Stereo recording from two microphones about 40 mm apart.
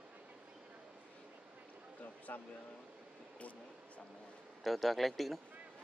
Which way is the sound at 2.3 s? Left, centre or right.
Left.